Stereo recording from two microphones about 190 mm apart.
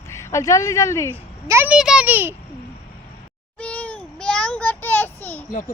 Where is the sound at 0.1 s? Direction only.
15° left (ahead or behind).